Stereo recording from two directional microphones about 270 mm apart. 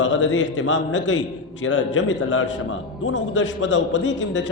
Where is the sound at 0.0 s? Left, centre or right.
Left.